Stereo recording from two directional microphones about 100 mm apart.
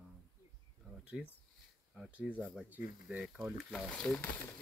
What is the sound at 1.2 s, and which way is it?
Speech, 10° right (ahead or behind).